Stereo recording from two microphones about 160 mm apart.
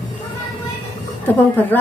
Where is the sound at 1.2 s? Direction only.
10° left (ahead or behind).